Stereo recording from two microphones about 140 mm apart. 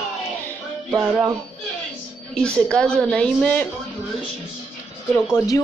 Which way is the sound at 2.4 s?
5° left (ahead or behind).